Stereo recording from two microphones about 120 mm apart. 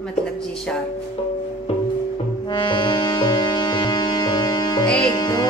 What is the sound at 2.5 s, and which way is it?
Music, 40° left (ahead or behind).